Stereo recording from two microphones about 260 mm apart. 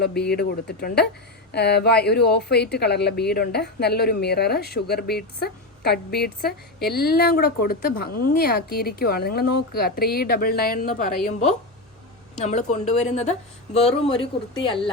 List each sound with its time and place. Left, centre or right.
0.0 s a woman's voice: left
12.4 s speech: left